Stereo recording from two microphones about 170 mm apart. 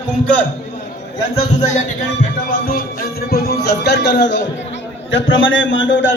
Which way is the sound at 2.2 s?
60° left (ahead or behind).